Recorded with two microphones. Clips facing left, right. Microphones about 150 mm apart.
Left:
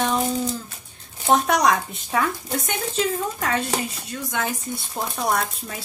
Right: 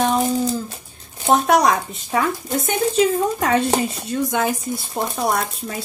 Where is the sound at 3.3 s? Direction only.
20° right (ahead or behind).